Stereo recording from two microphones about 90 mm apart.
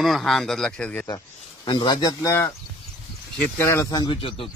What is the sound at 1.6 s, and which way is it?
Speech, 60° left (ahead or behind).